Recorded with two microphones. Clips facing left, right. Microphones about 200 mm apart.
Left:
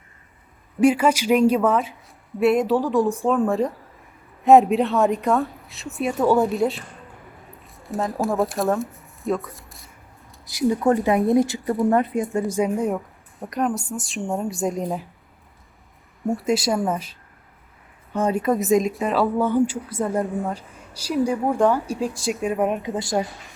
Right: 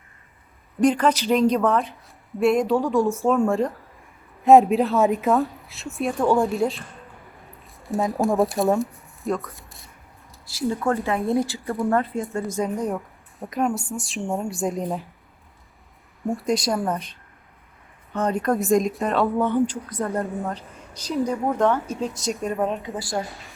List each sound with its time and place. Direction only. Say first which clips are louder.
0.8 s a woman's voice: left 2 dB; 10° left (ahead or behind)
10.4 s a woman's voice: left 4 dB; 15° left (ahead or behind)
12.5 s a woman's voice: left 2 dB; 5° left (ahead or behind)
16.2 s a woman's voice: left 2 dB; centre (ahead or behind)
20.2 s a woman's voice: left 2 dB; centre (ahead or behind)
21.2 s speech: left 1 dB; 10° left (ahead or behind)
22.2 s a woman's voice: left 2 dB; centre (ahead or behind)
22.5 s a woman's voice: left 3 dB; 20° left (ahead or behind)
23.2 s a woman's voice: left 3 dB; centre (ahead or behind)